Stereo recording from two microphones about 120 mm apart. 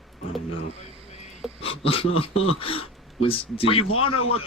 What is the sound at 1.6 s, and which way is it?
Speech, 50° left (ahead or behind).